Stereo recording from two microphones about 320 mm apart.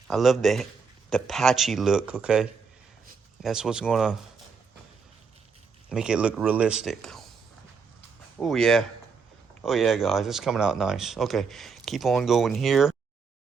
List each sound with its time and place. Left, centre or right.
0.1 s speech: centre
5.9 s speech: centre
8.4 s speech: centre